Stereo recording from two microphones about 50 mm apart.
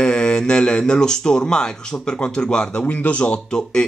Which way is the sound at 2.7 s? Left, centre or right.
Left.